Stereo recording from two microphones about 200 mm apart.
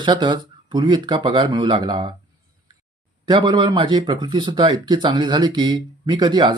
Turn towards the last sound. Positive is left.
turn(degrees=-25)  # may be behind; listen again after turning